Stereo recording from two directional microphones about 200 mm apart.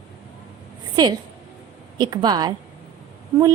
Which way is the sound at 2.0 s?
20° right (ahead or behind).